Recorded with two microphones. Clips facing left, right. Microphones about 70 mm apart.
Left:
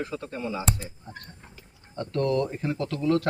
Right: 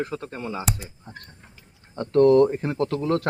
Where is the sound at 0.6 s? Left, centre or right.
Centre.